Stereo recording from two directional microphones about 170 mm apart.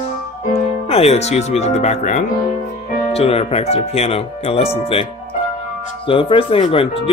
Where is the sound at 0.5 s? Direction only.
35° left (ahead or behind).